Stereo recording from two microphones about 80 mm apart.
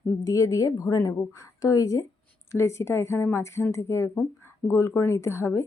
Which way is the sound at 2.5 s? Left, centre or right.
Left.